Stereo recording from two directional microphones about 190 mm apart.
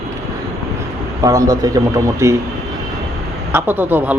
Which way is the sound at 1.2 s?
20° right (ahead or behind).